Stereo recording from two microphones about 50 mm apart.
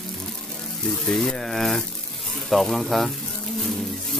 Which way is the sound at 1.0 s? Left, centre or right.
Centre.